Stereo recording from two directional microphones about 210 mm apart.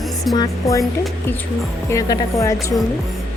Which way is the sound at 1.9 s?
15° left (ahead or behind).